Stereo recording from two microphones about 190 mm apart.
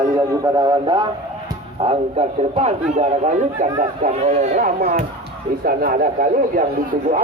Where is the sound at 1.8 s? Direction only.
30° right (ahead or behind).